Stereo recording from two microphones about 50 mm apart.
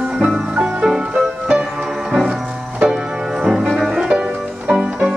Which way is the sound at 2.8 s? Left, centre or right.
Centre.